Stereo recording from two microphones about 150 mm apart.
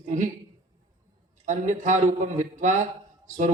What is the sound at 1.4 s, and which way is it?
Speech, 55° right (ahead or behind).